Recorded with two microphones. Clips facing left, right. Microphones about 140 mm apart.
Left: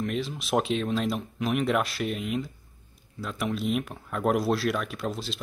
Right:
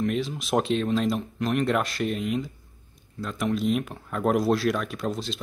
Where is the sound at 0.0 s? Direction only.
Centre (ahead or behind).